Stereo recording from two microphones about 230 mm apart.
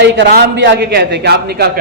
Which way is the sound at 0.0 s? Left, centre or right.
Right.